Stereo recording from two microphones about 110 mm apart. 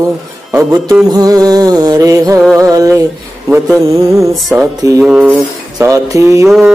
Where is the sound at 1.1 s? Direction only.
35° right (ahead or behind).